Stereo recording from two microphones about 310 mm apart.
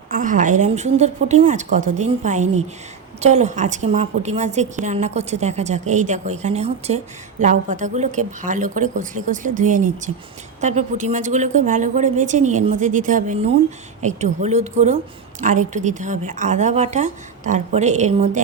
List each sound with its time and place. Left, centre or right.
0.1 s a woman's voice: right